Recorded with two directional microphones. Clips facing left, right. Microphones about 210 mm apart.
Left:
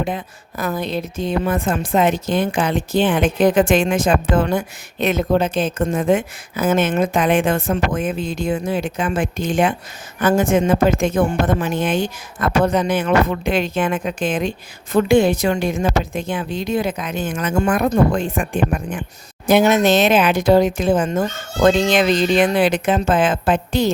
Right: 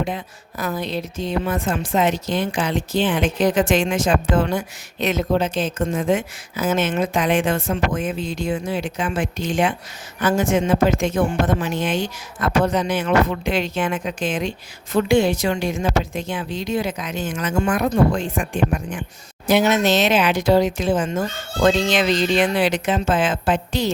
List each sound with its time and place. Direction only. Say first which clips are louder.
0.0 s a woman's voice: left 2 dB; 55° left (ahead or behind)